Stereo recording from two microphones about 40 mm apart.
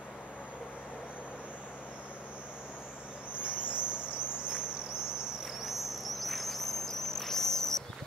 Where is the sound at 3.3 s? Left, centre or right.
Right.